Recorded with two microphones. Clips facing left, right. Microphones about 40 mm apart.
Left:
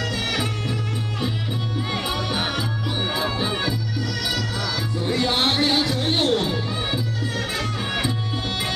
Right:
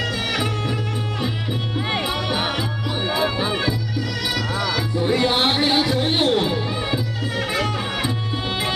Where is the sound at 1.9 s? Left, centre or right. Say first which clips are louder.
Right 3 dB; right.